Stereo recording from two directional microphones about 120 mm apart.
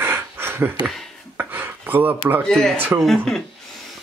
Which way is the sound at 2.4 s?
5° left (ahead or behind).